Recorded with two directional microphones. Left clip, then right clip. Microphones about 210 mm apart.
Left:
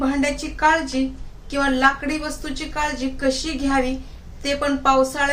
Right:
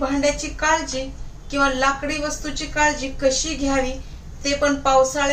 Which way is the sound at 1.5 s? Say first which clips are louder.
Right 1 dB; 45° left (ahead or behind).